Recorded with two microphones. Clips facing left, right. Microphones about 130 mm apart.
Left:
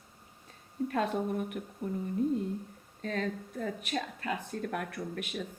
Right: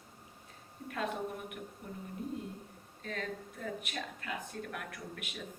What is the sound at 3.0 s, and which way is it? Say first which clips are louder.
Speech: left 6 dB; 40° left (ahead or behind).